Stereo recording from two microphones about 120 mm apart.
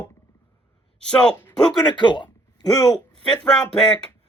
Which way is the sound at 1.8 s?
40° left (ahead or behind).